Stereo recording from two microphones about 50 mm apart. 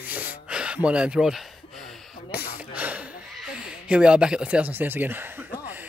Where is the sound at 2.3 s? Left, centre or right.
Right.